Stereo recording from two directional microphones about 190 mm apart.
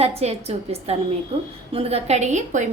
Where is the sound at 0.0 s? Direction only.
35° right (ahead or behind).